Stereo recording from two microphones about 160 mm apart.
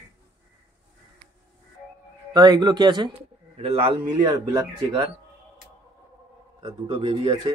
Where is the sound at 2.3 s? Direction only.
25° right (ahead or behind).